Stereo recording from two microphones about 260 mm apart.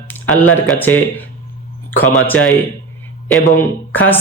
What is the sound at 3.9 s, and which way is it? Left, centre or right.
Speech, centre.